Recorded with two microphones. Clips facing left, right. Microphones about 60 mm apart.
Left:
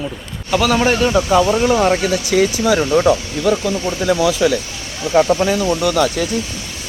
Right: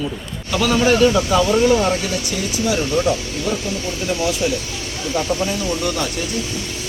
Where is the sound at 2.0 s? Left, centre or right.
Left.